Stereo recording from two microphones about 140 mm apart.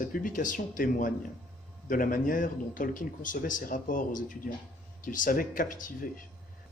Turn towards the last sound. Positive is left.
turn(degrees=70)  # may be behind; listen again after turning